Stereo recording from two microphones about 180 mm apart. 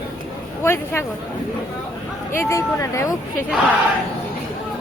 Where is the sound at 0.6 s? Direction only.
15° left (ahead or behind).